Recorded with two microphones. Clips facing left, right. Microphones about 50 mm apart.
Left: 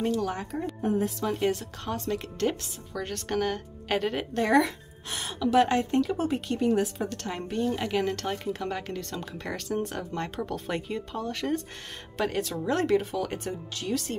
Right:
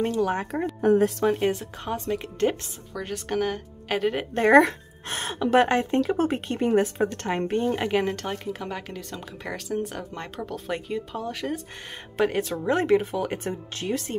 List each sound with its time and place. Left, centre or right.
0.0 s a woman's voice: right
0.7 s a woman's voice: right
1.2 s speech: right
2.9 s speech: centre
4.4 s a woman's voice: right
8.3 s speech: centre
12.2 s speech: right